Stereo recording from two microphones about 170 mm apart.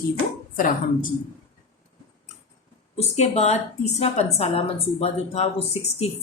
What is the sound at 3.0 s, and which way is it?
A woman's voice, 40° left (ahead or behind).